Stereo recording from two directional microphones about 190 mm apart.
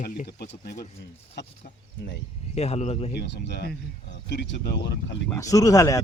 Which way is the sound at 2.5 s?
35° left (ahead or behind).